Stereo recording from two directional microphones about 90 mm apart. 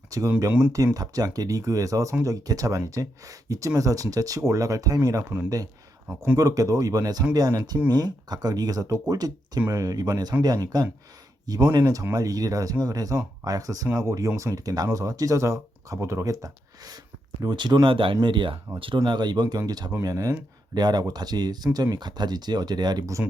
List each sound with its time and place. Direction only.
0.1 s speech: 40° right (ahead or behind)
6.3 s speech: 40° right (ahead or behind)
17.8 s speech: 70° right (ahead or behind); by 23.0 s 50° right (ahead or behind)